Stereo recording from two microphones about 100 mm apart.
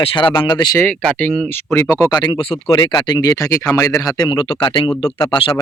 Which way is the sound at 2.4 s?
65° left (ahead or behind).